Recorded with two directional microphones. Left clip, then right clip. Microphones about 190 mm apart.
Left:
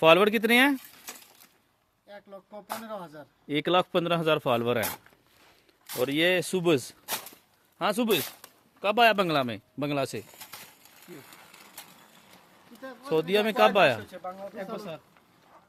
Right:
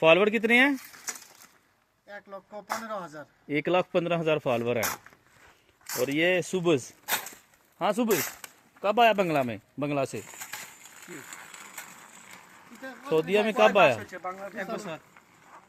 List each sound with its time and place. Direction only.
0.0 s speech: 15° left (ahead or behind)
2.1 s a man's voice: centre (ahead or behind); by 4.9 s 20° left (ahead or behind)
6.0 s a man's voice: 10° left (ahead or behind)
7.0 s a sound: 25° right (ahead or behind)
7.8 s speech: centre (ahead or behind)
11.1 s mechanisms: 5° right (ahead or behind)
13.1 s a man's voice: 5° left (ahead or behind)
14.2 s a man's voice: 15° left (ahead or behind)